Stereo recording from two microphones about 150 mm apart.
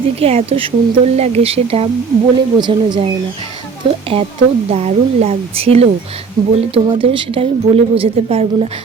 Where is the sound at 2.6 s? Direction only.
30° right (ahead or behind).